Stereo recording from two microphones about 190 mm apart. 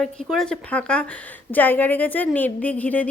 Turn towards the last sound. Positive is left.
turn(degrees=10)  # may be behind; listen again after turning